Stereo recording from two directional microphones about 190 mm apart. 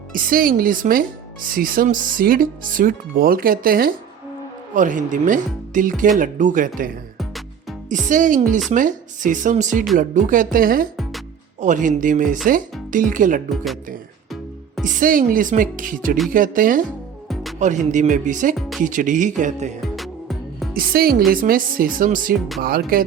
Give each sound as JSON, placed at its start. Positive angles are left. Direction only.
{"t": 0.1, "sound": "speech", "side_deg": -50}
{"t": 7.2, "sound": "music", "side_deg": 0}
{"t": 7.9, "sound": "speech", "side_deg": -40}
{"t": 14.8, "sound": "speech", "side_deg": -45}
{"t": 20.0, "sound": "music", "side_deg": 0}
{"t": 20.7, "sound": "speech", "side_deg": -50}